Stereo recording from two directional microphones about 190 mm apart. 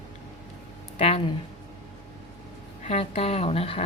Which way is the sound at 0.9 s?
30° left (ahead or behind).